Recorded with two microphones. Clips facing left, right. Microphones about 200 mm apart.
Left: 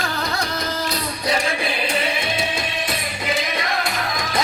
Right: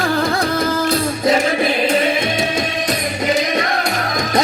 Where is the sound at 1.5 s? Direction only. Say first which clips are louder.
Right 8 dB; 40° right (ahead or behind).